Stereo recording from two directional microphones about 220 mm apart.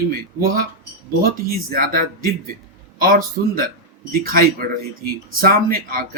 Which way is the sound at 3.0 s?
40° right (ahead or behind).